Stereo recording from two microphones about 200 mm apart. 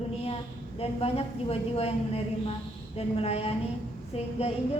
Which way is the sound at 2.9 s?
30° left (ahead or behind).